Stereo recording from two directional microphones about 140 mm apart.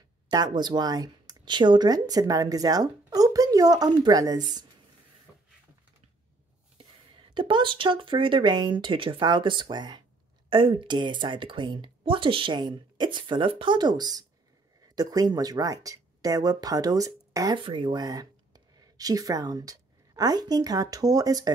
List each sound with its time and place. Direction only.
0.3 s speech: 30° right (ahead or behind)
7.3 s speech: 35° right (ahead or behind)
17.6 s speech: 35° right (ahead or behind)